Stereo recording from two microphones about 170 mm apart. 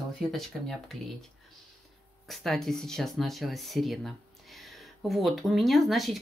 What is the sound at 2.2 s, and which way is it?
Speech, centre (ahead or behind).